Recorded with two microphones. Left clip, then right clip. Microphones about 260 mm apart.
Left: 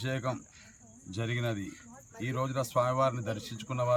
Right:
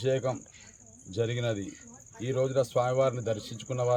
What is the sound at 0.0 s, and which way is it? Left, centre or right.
Speech, centre.